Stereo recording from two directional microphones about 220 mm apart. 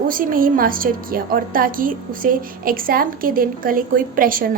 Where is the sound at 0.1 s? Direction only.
40° right (ahead or behind).